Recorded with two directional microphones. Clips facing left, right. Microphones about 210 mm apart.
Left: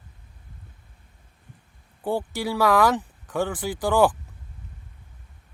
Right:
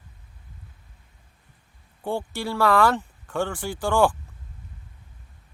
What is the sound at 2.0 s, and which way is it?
Speech, 10° left (ahead or behind).